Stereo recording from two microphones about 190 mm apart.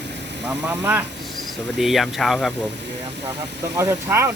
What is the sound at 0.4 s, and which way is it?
Speech, 10° right (ahead or behind).